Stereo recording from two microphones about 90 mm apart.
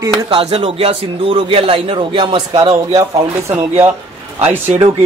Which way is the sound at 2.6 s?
40° right (ahead or behind).